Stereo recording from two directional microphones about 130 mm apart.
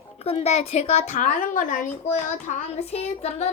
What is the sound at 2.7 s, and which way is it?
Speech, 50° left (ahead or behind).